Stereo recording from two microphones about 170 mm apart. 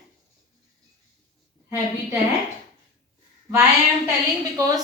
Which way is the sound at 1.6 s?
15° right (ahead or behind).